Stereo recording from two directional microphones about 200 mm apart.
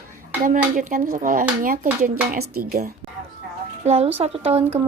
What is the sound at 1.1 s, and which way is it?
Speech, 40° right (ahead or behind).